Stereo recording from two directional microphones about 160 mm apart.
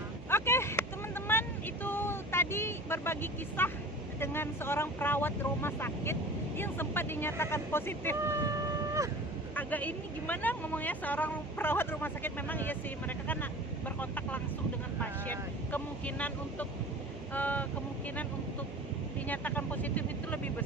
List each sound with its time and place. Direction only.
0.3 s vehicle: 15° left (ahead or behind)
4.2 s speech: 15° left (ahead or behind)
8.3 s a sound: 20° right (ahead or behind)
9.6 s speech: 10° left (ahead or behind)
19.3 s speech: 10° left (ahead or behind)